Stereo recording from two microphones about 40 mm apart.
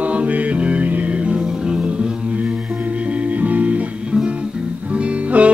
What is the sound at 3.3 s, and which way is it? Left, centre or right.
Music, right.